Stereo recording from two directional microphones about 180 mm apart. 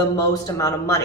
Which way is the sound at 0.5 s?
20° left (ahead or behind).